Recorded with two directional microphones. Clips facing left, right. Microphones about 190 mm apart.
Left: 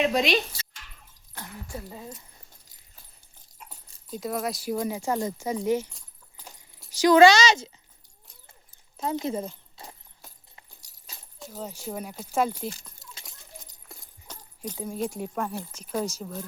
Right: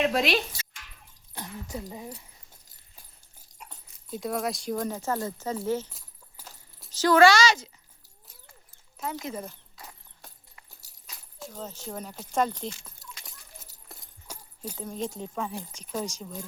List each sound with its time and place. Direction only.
0.0 s speech: centre (ahead or behind)
1.4 s speech: 20° right (ahead or behind)
3.5 s dog: centre (ahead or behind)
4.1 s speech: centre (ahead or behind)
6.4 s keys jangling: 10° right (ahead or behind)
6.9 s speech: 15° left (ahead or behind)
9.0 s speech: 30° left (ahead or behind)
11.3 s speech: 5° left (ahead or behind)
13.2 s a sound: 5° right (ahead or behind)
14.8 s speech: 10° left (ahead or behind)